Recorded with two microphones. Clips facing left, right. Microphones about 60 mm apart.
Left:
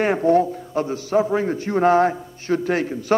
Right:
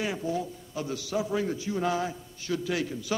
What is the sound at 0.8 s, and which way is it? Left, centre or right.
A man's voice, left.